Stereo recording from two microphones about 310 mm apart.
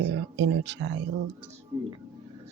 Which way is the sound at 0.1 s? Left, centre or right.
Right.